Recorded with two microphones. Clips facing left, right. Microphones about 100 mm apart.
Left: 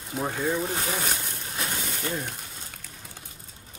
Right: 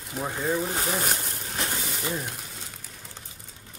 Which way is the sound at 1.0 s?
45° right (ahead or behind).